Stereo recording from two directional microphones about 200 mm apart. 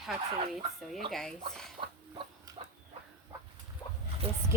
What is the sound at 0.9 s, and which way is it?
Speech, centre (ahead or behind).